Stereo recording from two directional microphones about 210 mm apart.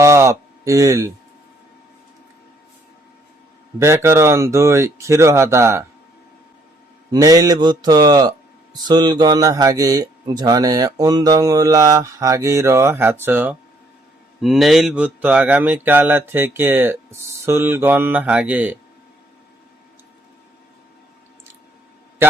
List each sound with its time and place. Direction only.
0.0 s a sound: 15° right (ahead or behind)
3.8 s a man's voice: 15° right (ahead or behind)
7.1 s a man's voice: 20° right (ahead or behind)